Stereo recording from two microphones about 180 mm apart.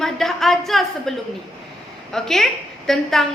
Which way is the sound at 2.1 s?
Centre (ahead or behind).